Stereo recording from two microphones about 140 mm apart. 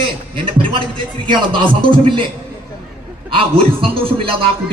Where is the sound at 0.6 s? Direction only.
35° right (ahead or behind).